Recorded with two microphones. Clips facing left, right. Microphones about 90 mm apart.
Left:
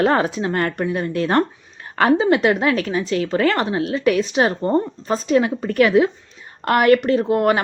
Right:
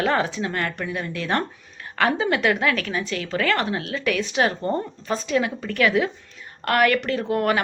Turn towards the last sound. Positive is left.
turn(degrees=30)  # may be behind; listen again after turning